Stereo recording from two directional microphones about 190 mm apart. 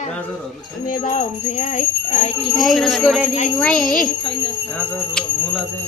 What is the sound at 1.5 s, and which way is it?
Speech, 40° left (ahead or behind).